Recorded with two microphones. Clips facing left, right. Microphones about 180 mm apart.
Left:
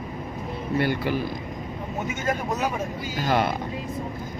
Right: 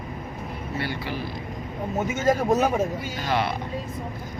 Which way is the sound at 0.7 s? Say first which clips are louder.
Left 7 dB; 50° left (ahead or behind).